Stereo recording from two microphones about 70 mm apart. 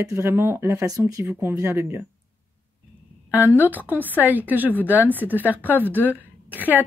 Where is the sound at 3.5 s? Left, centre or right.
Right.